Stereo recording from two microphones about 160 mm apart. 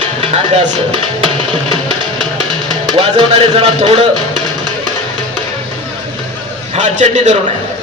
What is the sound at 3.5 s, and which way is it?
Speech, 40° right (ahead or behind).